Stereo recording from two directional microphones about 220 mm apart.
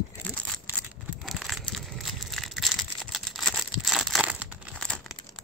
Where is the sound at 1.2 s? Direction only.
Centre (ahead or behind).